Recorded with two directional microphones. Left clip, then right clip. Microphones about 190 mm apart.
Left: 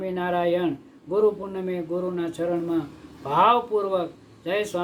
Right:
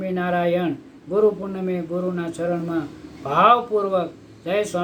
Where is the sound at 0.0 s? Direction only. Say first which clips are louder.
Right 2 dB; 10° left (ahead or behind).